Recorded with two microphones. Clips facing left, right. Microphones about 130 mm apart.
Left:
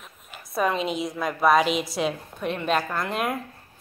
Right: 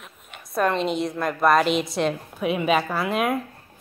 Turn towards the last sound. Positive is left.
turn(degrees=0)  # may be behind; listen again after turning